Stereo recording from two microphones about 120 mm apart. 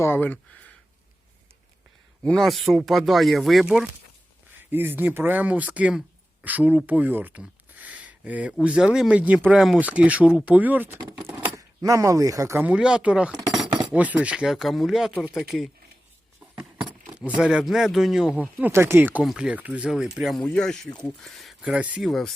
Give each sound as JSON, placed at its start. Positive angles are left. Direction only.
{"t": 0.0, "sound": "speech", "side_deg": 15}
{"t": 2.2, "sound": "speech", "side_deg": 5}
{"t": 4.5, "sound": "speech", "side_deg": -15}
{"t": 11.5, "sound": "speech", "side_deg": -30}
{"t": 12.6, "sound": "speech", "side_deg": -10}
{"t": 17.2, "sound": "speech", "side_deg": -10}
{"t": 19.2, "sound": "speech", "side_deg": -5}
{"t": 21.6, "sound": "speech", "side_deg": -10}